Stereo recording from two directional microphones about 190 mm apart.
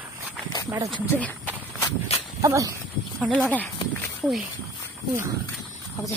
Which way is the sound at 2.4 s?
15° right (ahead or behind).